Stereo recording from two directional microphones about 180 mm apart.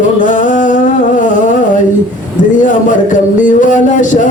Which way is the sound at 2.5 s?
45° left (ahead or behind).